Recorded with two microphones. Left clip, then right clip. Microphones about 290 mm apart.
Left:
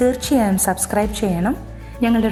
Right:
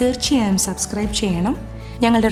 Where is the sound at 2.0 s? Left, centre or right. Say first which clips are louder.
Right 2 dB; centre.